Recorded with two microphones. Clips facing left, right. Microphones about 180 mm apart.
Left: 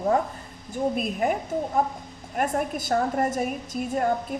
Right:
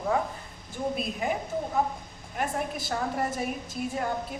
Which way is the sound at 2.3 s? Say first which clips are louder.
Left 5 dB; 45° left (ahead or behind).